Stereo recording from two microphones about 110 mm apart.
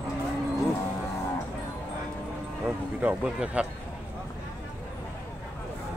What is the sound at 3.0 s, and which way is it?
Speech, 10° right (ahead or behind).